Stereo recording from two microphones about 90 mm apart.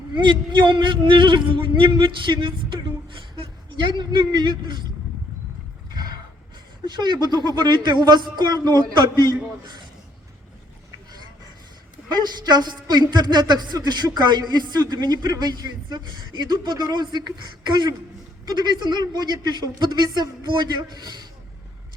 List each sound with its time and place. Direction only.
0.2 s speech: 60° right (ahead or behind)
3.9 s speech: 55° right (ahead or behind)
6.8 s a man's voice: 55° right (ahead or behind)
12.2 s a man's voice: 50° right (ahead or behind)